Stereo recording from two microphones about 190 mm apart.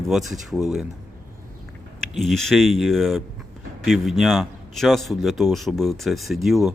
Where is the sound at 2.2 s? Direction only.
Centre (ahead or behind).